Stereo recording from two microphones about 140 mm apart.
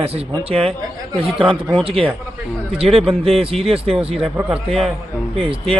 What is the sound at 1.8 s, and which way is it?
Speech, 40° right (ahead or behind).